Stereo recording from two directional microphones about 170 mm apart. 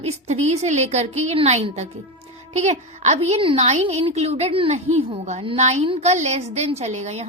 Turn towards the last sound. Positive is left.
turn(degrees=-40)  # may be behind; listen again after turning